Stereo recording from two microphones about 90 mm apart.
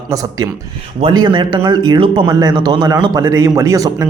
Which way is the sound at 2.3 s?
45° right (ahead or behind).